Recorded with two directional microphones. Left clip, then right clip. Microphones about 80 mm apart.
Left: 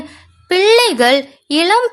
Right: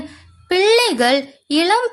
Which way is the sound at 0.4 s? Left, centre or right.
Left.